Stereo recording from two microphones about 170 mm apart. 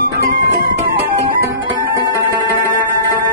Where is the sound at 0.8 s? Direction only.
55° right (ahead or behind).